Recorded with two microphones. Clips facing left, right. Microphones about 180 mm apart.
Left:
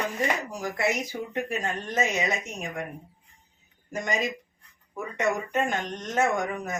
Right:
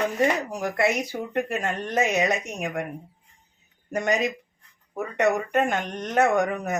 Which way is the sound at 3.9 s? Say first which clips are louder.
Right 6 dB; 65° right (ahead or behind).